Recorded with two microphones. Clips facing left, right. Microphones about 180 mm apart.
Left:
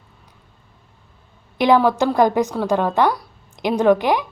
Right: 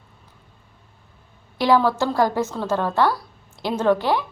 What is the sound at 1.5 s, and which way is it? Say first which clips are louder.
Speech: left 3 dB; 20° left (ahead or behind).